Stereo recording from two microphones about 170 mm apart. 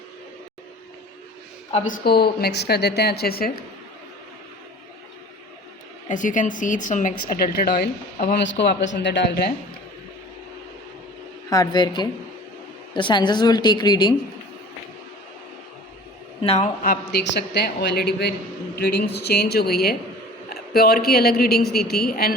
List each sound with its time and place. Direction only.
1.9 s a woman's voice: 65° left (ahead or behind)
6.1 s a woman's voice: 50° left (ahead or behind); by 9.5 s 80° left
11.4 s a woman's voice: 20° left (ahead or behind)
16.4 s a man's voice: 35° left (ahead or behind)
16.8 s a man's voice: 70° left (ahead or behind)